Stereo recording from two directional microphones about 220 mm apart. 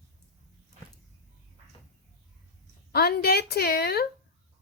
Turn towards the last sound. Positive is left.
turn(degrees=45)  # may be behind; listen again after turning